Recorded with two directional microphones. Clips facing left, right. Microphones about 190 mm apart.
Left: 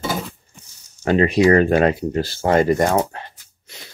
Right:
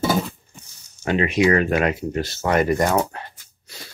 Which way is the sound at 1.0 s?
35° left (ahead or behind).